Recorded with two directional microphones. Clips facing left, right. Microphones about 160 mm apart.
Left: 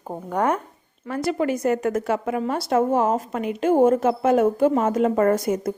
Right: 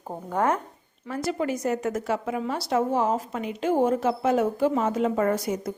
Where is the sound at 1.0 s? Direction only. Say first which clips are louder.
Left 4 dB; 65° left (ahead or behind).